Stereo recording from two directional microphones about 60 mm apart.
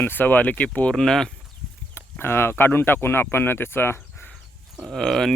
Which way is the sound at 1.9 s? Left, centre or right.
Left.